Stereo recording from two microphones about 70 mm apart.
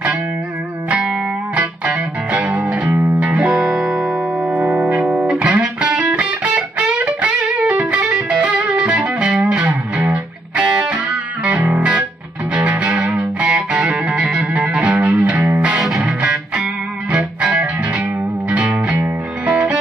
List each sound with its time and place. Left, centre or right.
0.8 s music: centre
4.6 s music: right